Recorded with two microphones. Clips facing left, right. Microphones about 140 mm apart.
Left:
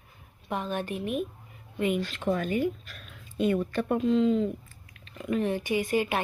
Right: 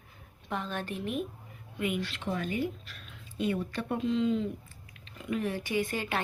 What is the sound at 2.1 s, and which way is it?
Speech, 50° left (ahead or behind).